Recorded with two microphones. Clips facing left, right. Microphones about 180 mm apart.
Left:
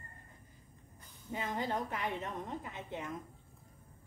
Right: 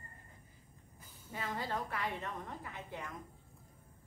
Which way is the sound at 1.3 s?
20° left (ahead or behind).